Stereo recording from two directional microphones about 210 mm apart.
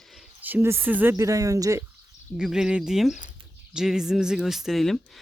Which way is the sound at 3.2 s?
20° right (ahead or behind).